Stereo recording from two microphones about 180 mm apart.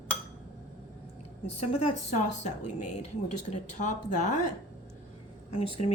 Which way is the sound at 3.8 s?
40° left (ahead or behind).